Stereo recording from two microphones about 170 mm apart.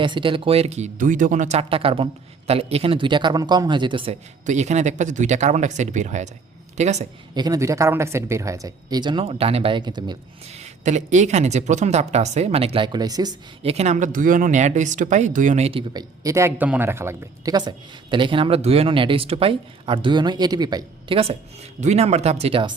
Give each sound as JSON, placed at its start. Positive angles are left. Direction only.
{"t": 0.0, "sound": "speech", "side_deg": -30}
{"t": 7.3, "sound": "speech", "side_deg": -20}
{"t": 10.5, "sound": "speech", "side_deg": -40}
{"t": 13.6, "sound": "speech", "side_deg": -35}
{"t": 15.9, "sound": "speech", "side_deg": -20}